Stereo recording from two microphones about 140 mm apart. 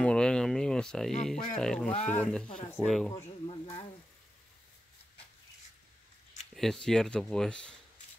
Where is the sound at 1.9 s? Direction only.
55° left (ahead or behind).